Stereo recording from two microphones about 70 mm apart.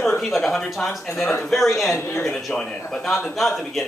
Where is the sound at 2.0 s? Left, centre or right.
Left.